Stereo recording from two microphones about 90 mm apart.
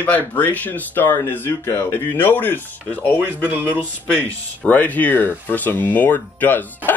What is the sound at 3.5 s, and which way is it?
Speech, 20° right (ahead or behind).